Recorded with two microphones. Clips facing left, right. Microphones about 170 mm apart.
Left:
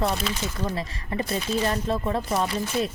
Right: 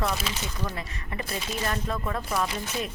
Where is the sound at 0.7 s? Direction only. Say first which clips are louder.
Left 6 dB; 30° left (ahead or behind).